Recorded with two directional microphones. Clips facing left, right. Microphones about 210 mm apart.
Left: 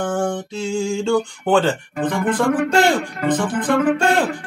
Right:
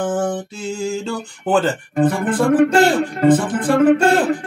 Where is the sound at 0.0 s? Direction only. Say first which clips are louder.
Right 1 dB; 5° right (ahead or behind).